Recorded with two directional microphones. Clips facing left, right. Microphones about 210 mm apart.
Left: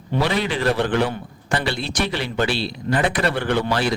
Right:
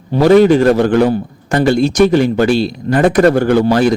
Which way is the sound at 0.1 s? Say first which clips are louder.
Right 14 dB; 45° right (ahead or behind).